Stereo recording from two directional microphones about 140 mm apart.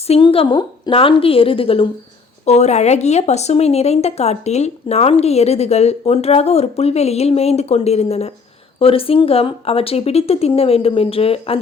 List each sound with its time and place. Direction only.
0.1 s a woman's voice: 40° left (ahead or behind)
2.4 s speech: 50° left (ahead or behind)